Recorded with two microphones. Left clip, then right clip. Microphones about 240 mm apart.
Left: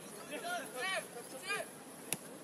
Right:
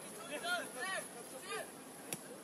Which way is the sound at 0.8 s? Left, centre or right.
Left.